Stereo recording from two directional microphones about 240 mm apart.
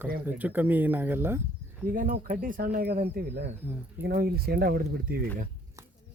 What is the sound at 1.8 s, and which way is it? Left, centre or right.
Speech, right.